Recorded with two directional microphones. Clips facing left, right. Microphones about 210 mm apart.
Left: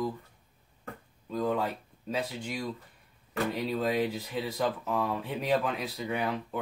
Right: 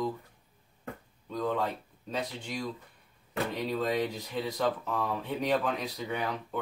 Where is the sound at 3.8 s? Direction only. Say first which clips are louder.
Left 2 dB; 5° left (ahead or behind).